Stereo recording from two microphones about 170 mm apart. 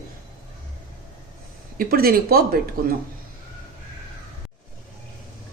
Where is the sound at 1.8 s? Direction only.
60° right (ahead or behind).